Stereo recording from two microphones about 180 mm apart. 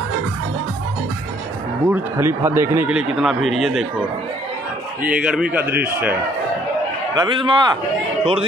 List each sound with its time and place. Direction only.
1.9 s speech: 15° right (ahead or behind)
5.0 s speech: 5° right (ahead or behind)
7.2 s a man's voice: 25° right (ahead or behind)